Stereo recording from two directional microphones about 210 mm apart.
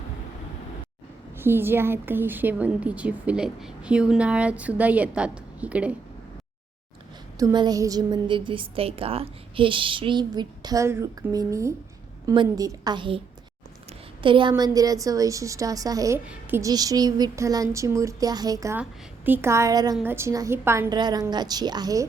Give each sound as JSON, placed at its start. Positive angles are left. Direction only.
{"t": 1.4, "sound": "a woman's voice", "side_deg": -10}
{"t": 7.3, "sound": "a woman's voice", "side_deg": -20}